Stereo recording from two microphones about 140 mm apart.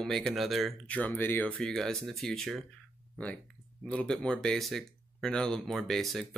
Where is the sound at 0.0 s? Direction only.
5° left (ahead or behind).